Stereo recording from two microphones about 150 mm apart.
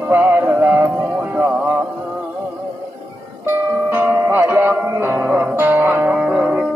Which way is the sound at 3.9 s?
15° right (ahead or behind).